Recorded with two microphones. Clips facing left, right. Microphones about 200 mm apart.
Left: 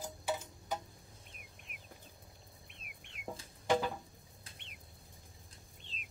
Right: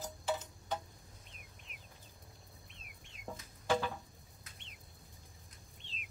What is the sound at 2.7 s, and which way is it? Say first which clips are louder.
Chicken: left 1 dB; 65° left (ahead or behind).